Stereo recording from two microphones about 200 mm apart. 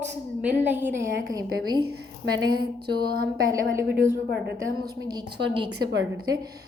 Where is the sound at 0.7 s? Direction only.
10° right (ahead or behind).